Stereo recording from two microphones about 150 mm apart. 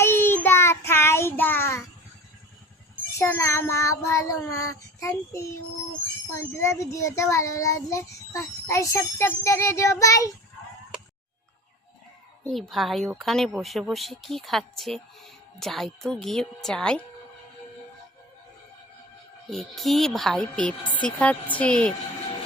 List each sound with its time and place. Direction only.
0.0 s child singing: 15° left (ahead or behind)
3.2 s a child's voice: 20° left (ahead or behind)
12.5 s a woman's voice: centre (ahead or behind)
19.5 s a woman's voice: centre (ahead or behind)